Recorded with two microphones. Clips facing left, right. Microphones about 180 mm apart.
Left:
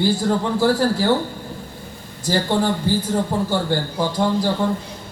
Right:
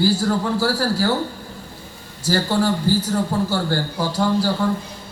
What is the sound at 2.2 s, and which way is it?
A man's voice, 20° left (ahead or behind).